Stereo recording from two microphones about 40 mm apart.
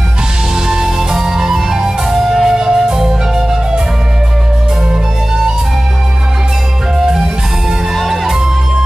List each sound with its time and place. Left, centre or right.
0.7 s music: centre
2.5 s music: centre
7.0 s music: centre